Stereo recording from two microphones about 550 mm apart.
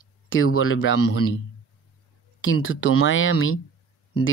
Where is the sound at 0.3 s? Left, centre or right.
Left.